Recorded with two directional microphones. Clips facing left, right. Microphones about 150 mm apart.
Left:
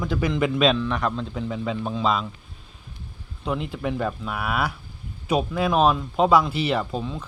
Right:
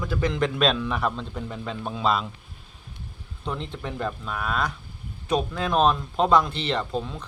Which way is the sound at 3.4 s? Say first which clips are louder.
Left 5 dB; 5° left (ahead or behind).